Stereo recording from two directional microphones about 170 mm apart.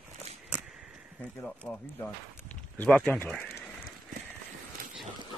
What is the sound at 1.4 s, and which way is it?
Speech, 5° left (ahead or behind).